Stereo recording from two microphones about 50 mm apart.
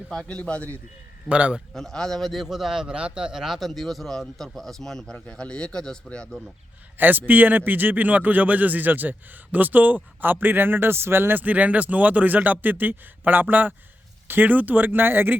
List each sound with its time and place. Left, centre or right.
0.3 s a man's voice: left
1.3 s a man's voice: right
1.7 s a man's voice: centre
2.8 s a man's voice: centre
3.4 s a man's voice: centre
7.0 s speech: right
11.4 s speech: right